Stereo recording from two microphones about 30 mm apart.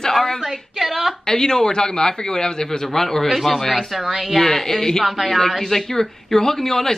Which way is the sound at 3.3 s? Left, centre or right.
Centre.